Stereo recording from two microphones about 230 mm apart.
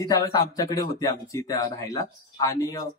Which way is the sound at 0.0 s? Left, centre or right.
Centre.